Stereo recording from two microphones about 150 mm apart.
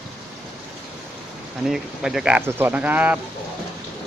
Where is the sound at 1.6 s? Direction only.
5° right (ahead or behind).